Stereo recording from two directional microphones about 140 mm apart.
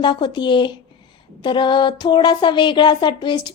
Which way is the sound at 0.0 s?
35° left (ahead or behind).